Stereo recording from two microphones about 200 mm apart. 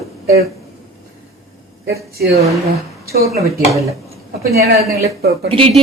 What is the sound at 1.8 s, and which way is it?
Speech, 50° right (ahead or behind).